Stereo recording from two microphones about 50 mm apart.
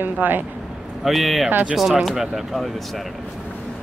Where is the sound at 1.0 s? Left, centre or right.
Centre.